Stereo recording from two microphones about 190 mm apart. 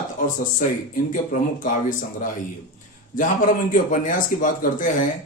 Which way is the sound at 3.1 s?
45° left (ahead or behind).